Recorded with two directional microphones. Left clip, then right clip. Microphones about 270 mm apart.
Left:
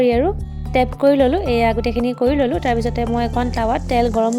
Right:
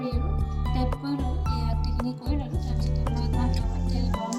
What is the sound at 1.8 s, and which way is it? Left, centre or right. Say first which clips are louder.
Speech: left 16 dB; left.